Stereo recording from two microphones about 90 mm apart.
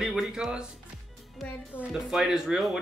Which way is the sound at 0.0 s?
5° right (ahead or behind).